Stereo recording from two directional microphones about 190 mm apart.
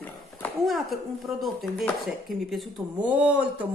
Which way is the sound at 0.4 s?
Centre (ahead or behind).